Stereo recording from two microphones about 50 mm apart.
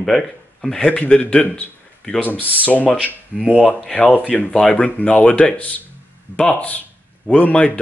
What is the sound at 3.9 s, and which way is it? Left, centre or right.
Speech, left.